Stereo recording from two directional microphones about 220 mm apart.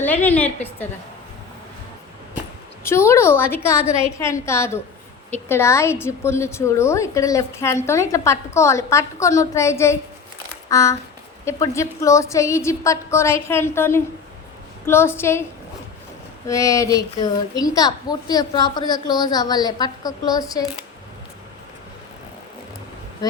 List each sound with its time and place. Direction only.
0.0 s a child's voice: 10° left (ahead or behind)
2.8 s a child's voice: 10° left (ahead or behind)
16.5 s a child's voice: 15° left (ahead or behind)